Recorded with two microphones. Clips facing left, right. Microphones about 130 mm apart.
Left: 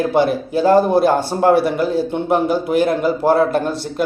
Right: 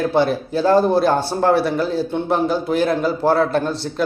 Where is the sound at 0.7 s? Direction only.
15° left (ahead or behind).